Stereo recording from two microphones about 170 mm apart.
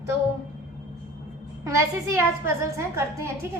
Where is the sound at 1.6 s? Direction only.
15° right (ahead or behind).